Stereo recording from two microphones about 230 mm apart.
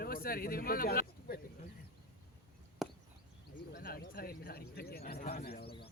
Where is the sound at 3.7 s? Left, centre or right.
Left.